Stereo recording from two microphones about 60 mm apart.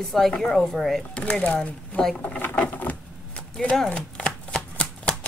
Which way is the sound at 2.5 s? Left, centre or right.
Left.